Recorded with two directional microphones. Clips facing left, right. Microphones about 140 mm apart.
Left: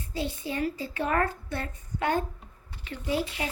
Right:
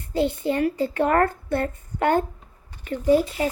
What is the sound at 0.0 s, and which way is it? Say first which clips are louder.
A child's voice: right 10 dB; 60° right (ahead or behind).